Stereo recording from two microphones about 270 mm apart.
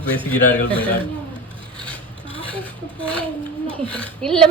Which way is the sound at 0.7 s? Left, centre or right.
Centre.